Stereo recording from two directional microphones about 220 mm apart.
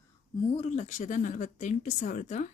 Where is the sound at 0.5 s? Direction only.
30° left (ahead or behind).